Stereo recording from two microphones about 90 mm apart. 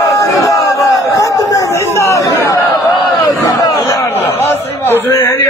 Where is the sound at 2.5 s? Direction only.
35° left (ahead or behind).